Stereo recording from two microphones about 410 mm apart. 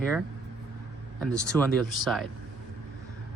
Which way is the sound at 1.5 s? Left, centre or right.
Centre.